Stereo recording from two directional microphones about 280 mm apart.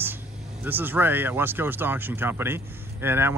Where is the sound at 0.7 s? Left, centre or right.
Centre.